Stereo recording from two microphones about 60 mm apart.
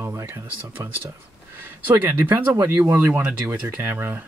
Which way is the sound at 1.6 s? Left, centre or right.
Right.